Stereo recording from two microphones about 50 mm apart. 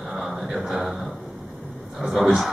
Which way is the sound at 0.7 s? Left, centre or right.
Centre.